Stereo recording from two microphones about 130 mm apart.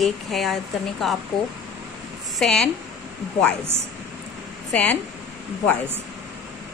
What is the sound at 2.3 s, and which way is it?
Speech, 5° left (ahead or behind).